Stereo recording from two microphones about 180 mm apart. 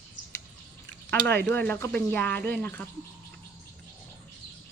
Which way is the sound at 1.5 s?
10° left (ahead or behind).